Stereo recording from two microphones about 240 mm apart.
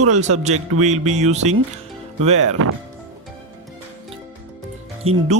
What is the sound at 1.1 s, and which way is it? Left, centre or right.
Speech, right.